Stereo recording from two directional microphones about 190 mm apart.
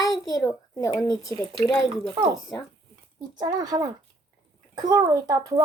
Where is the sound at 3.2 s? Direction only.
20° right (ahead or behind).